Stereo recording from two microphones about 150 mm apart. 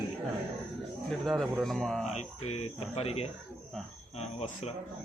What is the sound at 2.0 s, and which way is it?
Speech, 45° left (ahead or behind).